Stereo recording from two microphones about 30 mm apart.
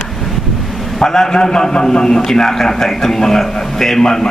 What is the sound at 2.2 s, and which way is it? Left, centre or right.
A man's voice, centre.